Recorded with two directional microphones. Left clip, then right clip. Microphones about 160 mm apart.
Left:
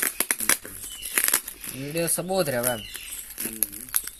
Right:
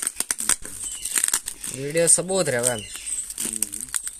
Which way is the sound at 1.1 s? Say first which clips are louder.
Left 1 dB; 30° right (ahead or behind).